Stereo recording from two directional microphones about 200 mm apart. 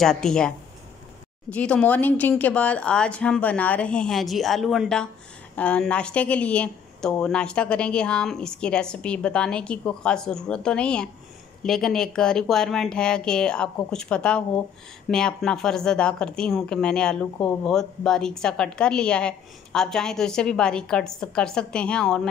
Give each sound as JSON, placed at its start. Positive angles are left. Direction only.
{"t": 0.0, "sound": "speech", "side_deg": 5}
{"t": 1.5, "sound": "speech", "side_deg": 5}